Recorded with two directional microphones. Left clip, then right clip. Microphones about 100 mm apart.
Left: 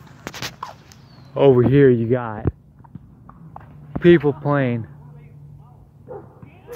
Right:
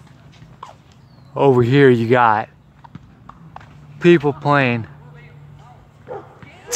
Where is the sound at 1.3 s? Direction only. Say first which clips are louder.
Even; 25° right (ahead or behind).